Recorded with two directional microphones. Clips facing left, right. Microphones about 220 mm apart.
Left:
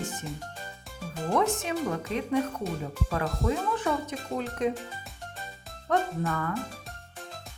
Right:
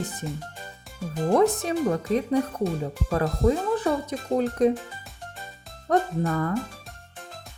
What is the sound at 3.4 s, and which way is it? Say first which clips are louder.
Speech: right 6 dB; 35° right (ahead or behind).